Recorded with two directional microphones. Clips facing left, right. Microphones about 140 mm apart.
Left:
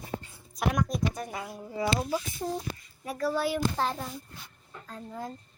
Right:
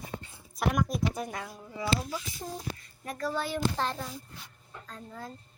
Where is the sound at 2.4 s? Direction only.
60° left (ahead or behind).